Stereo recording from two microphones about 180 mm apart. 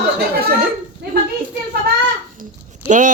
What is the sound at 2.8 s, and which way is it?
Speech, 45° right (ahead or behind).